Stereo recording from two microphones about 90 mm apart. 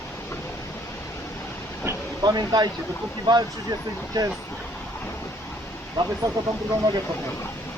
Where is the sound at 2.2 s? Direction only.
50° right (ahead or behind).